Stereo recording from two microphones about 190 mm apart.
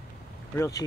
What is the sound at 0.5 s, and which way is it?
Speech, 15° left (ahead or behind).